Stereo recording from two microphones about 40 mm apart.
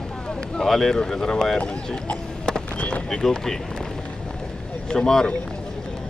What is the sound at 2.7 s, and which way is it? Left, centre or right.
Speech, left.